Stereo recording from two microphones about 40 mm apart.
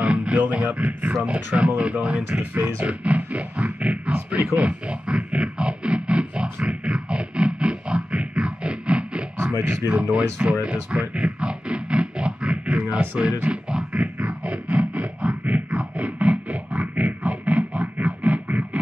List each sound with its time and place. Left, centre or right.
0.0 s music: right
0.7 s speech: right
4.6 s music: right
9.4 s speech: right
10.1 s music: right
13.2 s speech: right
13.5 s music: right
13.9 s music: right